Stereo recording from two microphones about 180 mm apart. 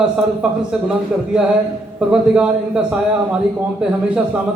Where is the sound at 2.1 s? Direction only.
5° right (ahead or behind).